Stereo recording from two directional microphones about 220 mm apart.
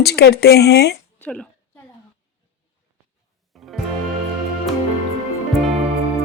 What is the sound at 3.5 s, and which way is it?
Music, centre (ahead or behind).